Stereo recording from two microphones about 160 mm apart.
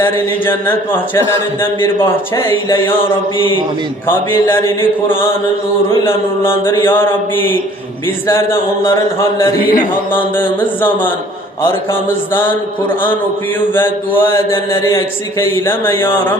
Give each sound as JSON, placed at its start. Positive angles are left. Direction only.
{"t": 0.0, "sound": "speech", "side_deg": 15}
{"t": 2.6, "sound": "mantra", "side_deg": 30}
{"t": 4.0, "sound": "speech", "side_deg": 15}
{"t": 6.4, "sound": "speech", "side_deg": 15}
{"t": 9.6, "sound": "chant", "side_deg": 65}
{"t": 10.3, "sound": "speech", "side_deg": 10}
{"t": 14.2, "sound": "speech", "side_deg": 15}